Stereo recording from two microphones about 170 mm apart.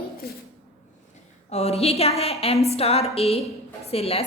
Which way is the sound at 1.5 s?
40° left (ahead or behind).